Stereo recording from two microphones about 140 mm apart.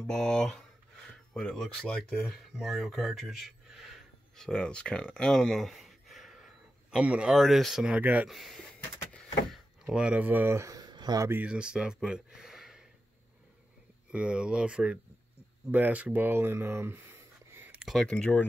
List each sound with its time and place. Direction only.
0.0 s speech: 5° left (ahead or behind); by 8.4 s 10° right (ahead or behind)
8.4 s speech: centre (ahead or behind)
9.1 s door: centre (ahead or behind); by 11.4 s 20° right (ahead or behind)
11.4 s speech: 5° right (ahead or behind)
14.1 s speech: 5° right (ahead or behind)
17.8 s speech: 5° left (ahead or behind)